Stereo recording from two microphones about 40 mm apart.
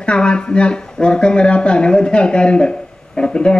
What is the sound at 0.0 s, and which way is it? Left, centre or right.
Speech, left.